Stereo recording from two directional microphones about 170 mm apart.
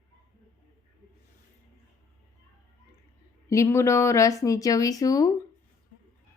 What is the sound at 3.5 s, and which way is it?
Speech, 15° left (ahead or behind).